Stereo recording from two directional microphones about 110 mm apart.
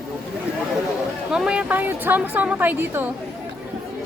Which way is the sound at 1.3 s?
5° right (ahead or behind).